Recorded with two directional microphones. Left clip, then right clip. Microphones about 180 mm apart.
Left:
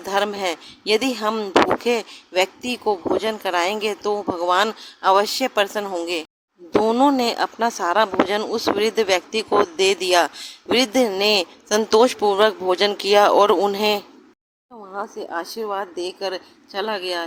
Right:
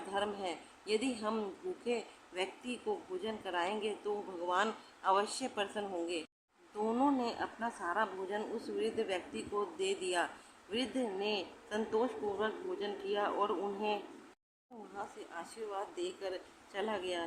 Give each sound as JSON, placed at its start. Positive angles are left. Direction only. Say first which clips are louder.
{"t": 0.1, "sound": "speech", "louder": "left 16 dB", "side_deg": 45}
{"t": 14.9, "sound": "a woman's voice", "louder": "left 17 dB", "side_deg": 40}